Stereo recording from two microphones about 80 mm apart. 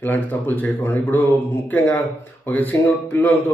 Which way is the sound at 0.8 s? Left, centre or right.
Left.